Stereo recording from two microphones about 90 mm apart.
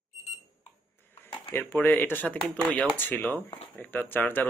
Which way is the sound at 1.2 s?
20° left (ahead or behind).